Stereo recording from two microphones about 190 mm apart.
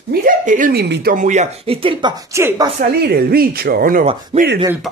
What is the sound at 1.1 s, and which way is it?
Speech, 40° right (ahead or behind).